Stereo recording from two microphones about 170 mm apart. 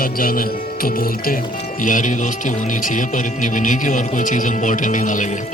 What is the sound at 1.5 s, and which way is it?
Speech, 50° left (ahead or behind).